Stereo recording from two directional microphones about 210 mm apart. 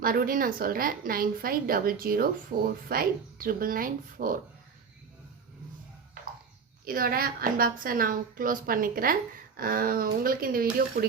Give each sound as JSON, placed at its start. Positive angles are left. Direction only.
{"t": 0.0, "sound": "a woman's voice", "side_deg": -40}
{"t": 6.8, "sound": "a woman's voice", "side_deg": -45}